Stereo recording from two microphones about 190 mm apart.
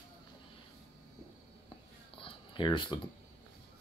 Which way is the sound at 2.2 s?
25° left (ahead or behind).